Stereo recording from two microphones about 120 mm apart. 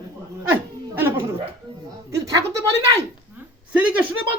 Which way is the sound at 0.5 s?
15° right (ahead or behind).